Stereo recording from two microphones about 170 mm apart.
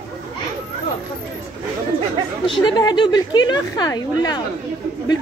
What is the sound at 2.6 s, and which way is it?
Speech, 25° left (ahead or behind).